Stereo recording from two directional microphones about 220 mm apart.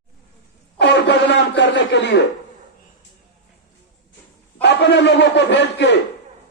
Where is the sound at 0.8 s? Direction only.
50° left (ahead or behind).